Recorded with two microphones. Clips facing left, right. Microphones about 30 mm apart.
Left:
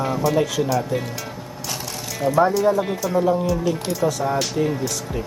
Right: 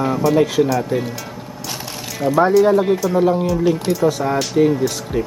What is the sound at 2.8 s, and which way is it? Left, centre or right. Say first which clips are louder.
Speech: right 5 dB; centre.